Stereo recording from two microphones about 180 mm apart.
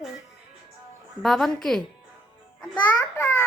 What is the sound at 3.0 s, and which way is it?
Speech, 15° left (ahead or behind).